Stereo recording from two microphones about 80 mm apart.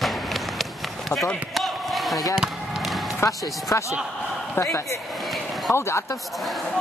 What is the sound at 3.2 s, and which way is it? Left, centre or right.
Speech, left.